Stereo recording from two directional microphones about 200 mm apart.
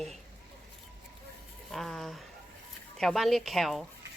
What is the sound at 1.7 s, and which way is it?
Speech, centre (ahead or behind).